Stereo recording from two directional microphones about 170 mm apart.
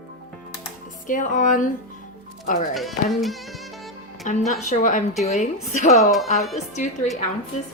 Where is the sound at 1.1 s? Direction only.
50° left (ahead or behind).